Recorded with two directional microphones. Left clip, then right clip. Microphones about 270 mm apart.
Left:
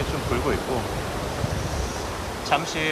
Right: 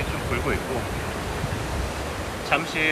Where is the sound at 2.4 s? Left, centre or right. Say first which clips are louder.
Even; centre.